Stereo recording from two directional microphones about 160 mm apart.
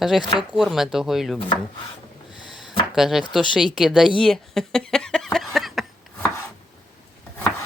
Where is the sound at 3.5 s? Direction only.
5° right (ahead or behind).